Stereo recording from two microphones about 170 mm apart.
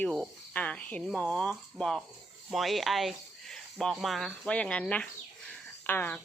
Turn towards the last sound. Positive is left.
turn(degrees=10)  # may be behind; listen again after turning